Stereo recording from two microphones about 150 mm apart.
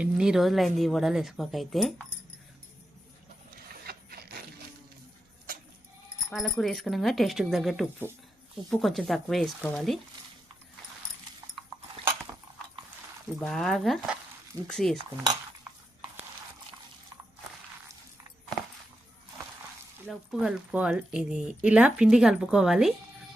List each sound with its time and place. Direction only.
0.0 s speech: 5° right (ahead or behind)
3.8 s printer: 90° right
6.3 s speech: centre (ahead or behind)
13.4 s speech: centre (ahead or behind)
20.1 s speech: 5° right (ahead or behind)